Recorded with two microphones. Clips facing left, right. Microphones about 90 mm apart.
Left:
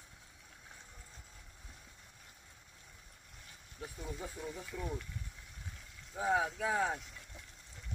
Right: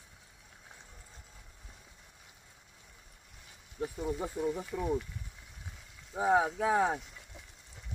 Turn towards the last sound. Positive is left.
turn(degrees=-30)  # may be behind; listen again after turning